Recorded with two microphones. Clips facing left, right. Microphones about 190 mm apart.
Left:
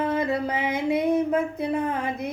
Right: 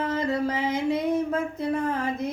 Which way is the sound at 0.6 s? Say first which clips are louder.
Left 1 dB; 60° left (ahead or behind).